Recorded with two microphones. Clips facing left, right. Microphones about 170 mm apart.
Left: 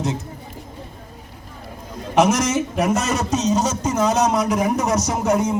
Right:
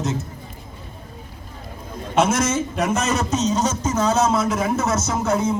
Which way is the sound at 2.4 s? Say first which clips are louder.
Left 1 dB; 10° left (ahead or behind).